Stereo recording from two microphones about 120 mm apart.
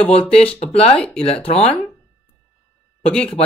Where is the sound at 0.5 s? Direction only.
55° left (ahead or behind).